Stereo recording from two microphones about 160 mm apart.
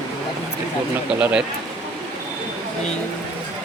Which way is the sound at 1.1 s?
5° right (ahead or behind).